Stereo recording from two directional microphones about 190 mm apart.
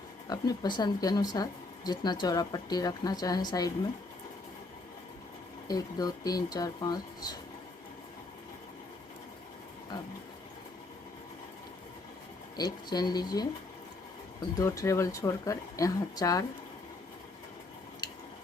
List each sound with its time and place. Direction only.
0.3 s speech: 20° left (ahead or behind)
5.6 s speech: 20° left (ahead or behind)
12.5 s speech: 20° left (ahead or behind)
14.6 s speech: 15° left (ahead or behind)